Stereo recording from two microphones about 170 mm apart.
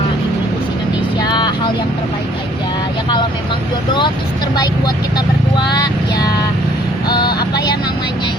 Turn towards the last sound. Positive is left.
turn(degrees=25)  # may be behind; listen again after turning